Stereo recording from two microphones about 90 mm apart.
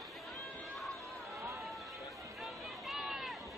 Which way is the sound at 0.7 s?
Centre (ahead or behind).